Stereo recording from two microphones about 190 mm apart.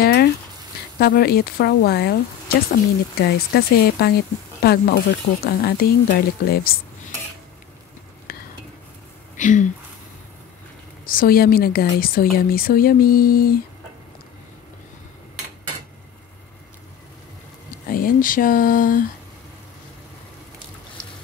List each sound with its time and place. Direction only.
0.0 s a sound: 55° left (ahead or behind)
0.9 s speech: 55° left (ahead or behind)
3.2 s speech: 55° left (ahead or behind)
8.3 s stir: 50° left (ahead or behind)
9.4 s speech: 40° left (ahead or behind)
11.1 s speech: 50° left (ahead or behind)
17.8 s a sound: 50° left (ahead or behind)